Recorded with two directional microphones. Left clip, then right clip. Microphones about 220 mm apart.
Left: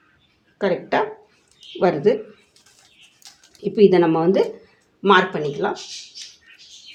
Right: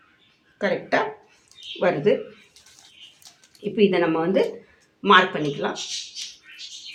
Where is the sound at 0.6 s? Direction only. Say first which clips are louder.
Left 2 dB; 40° left (ahead or behind).